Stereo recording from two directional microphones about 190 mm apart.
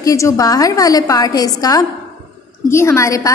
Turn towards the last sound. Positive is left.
turn(degrees=15)  # may be behind; listen again after turning